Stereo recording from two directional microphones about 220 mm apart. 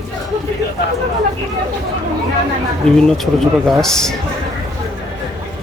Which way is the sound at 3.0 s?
Centre (ahead or behind).